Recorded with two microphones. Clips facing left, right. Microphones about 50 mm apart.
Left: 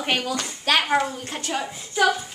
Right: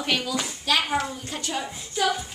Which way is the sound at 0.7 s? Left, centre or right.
Left.